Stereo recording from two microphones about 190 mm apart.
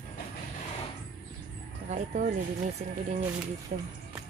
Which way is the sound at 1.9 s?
45° right (ahead or behind).